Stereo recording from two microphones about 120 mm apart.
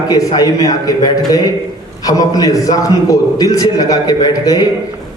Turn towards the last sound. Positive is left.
turn(degrees=30)  # may be behind; listen again after turning